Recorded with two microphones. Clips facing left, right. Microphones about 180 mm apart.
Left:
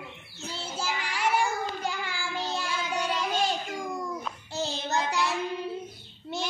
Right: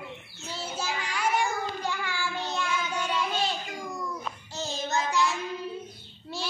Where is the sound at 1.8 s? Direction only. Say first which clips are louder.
Right 1 dB; 30° left (ahead or behind).